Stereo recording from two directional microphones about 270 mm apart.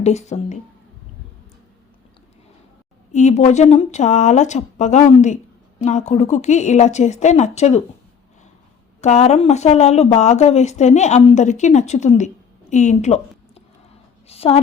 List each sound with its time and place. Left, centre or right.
0.0 s speech: left
3.1 s speech: left
9.0 s a woman's voice: left